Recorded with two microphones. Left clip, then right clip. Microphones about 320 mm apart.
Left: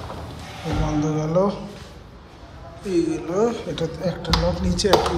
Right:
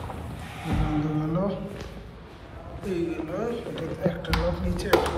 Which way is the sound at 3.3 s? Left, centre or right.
Centre.